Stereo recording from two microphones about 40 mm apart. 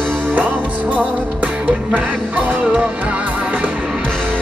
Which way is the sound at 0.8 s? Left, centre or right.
Right.